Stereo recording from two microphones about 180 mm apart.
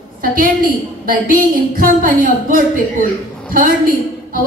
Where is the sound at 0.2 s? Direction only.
50° right (ahead or behind).